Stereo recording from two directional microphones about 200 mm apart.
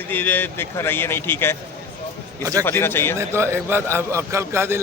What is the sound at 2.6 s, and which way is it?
Speech, 10° left (ahead or behind).